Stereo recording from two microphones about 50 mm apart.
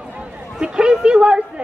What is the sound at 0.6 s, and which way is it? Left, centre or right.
Speech, centre.